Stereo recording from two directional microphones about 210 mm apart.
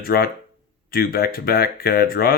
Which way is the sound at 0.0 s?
45° left (ahead or behind).